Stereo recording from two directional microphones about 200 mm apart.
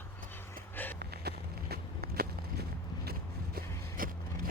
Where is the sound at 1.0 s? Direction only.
50° right (ahead or behind).